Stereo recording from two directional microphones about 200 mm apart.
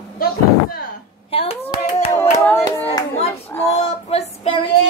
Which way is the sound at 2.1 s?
15° left (ahead or behind).